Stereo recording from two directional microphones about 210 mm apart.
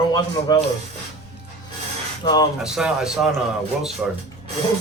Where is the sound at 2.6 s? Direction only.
5° right (ahead or behind).